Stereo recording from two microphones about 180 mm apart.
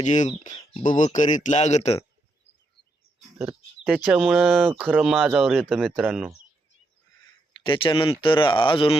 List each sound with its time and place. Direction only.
0.0 s speech: 40° left (ahead or behind)
0.5 s speech: 25° left (ahead or behind)
0.9 s speech: 45° left (ahead or behind)
3.8 s speech: 10° right (ahead or behind)
7.6 s speech: 30° left (ahead or behind)